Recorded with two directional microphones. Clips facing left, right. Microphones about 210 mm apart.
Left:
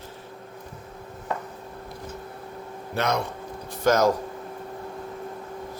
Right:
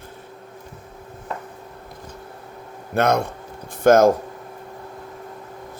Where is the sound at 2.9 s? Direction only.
50° right (ahead or behind).